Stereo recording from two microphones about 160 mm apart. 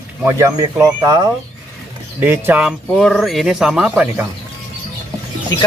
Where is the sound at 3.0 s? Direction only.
Centre (ahead or behind).